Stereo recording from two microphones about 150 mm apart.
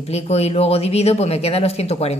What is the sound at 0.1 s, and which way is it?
Speech, 45° left (ahead or behind).